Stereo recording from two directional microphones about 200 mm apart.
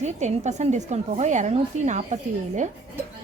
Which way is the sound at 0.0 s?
35° right (ahead or behind).